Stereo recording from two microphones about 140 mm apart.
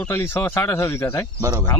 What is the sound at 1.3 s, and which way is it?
Speech, 20° right (ahead or behind).